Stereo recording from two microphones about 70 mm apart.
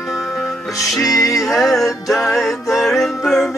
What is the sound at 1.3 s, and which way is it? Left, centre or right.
Music, centre.